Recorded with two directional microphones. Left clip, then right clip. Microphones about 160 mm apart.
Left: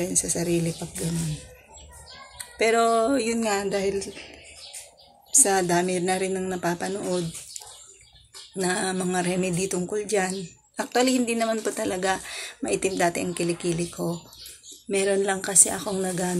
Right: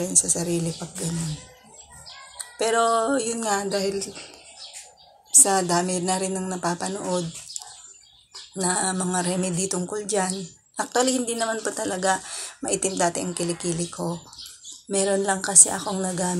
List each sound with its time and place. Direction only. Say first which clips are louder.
0.0 s speech: right 2 dB; 5° left (ahead or behind)
2.5 s a woman's voice: even; 10° left (ahead or behind)
5.7 s speech: even; 10° left (ahead or behind)
8.5 s speech: right 1 dB; 10° left (ahead or behind)
15.2 s speech: right 3 dB; 10° left (ahead or behind)